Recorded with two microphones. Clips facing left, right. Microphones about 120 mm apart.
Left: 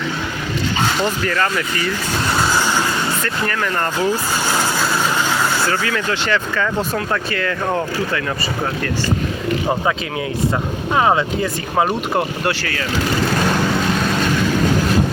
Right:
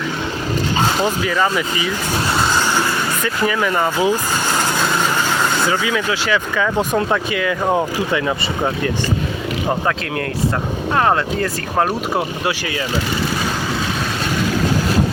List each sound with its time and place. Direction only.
1.0 s speech: 10° right (ahead or behind)
3.4 s speech: 10° right (ahead or behind)
5.5 s speech: 15° right (ahead or behind)
10.9 s speech: 5° left (ahead or behind)